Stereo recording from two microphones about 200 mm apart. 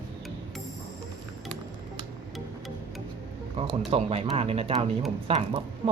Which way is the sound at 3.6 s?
30° right (ahead or behind).